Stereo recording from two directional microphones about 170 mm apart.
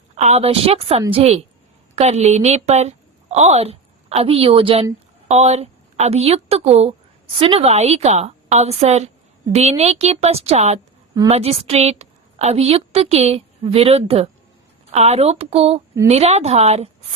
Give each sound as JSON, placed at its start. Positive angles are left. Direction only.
{"t": 0.2, "sound": "a woman's voice", "side_deg": -40}